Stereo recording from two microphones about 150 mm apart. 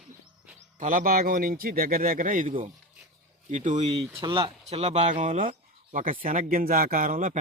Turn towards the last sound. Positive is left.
turn(degrees=-60)  # may be behind; listen again after turning